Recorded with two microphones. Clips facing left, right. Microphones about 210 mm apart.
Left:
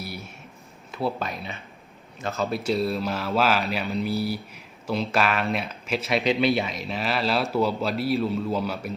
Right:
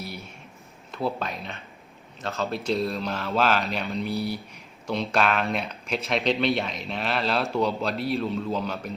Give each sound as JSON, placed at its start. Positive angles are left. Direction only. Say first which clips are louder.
{"t": 0.9, "sound": "speech", "louder": "left 1 dB", "side_deg": 5}